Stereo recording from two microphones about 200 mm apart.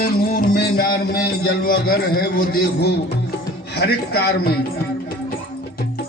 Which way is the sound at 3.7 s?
55° left (ahead or behind).